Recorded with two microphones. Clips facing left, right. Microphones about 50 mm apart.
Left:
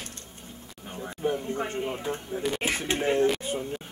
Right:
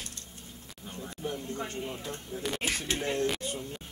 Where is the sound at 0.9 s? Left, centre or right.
Left.